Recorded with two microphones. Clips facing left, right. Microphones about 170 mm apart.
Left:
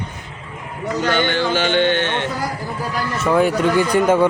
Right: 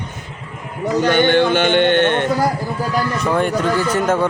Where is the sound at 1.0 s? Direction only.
55° right (ahead or behind).